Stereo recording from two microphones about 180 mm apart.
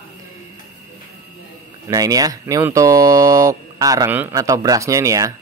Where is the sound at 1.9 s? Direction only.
20° right (ahead or behind).